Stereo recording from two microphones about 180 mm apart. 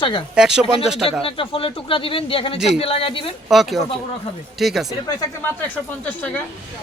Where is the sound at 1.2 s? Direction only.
30° left (ahead or behind).